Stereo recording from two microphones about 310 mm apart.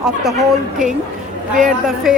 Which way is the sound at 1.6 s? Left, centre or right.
Centre.